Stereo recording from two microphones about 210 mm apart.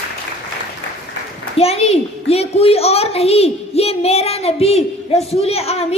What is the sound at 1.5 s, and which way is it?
A child's voice, 30° left (ahead or behind).